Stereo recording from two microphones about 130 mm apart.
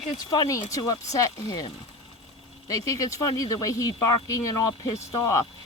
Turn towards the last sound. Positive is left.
turn(degrees=25)  # may be behind; listen again after turning